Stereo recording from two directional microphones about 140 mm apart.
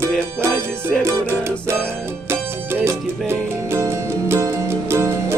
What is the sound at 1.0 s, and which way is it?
Music, 15° right (ahead or behind).